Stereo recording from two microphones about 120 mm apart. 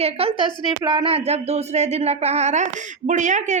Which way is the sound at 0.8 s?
40° right (ahead or behind).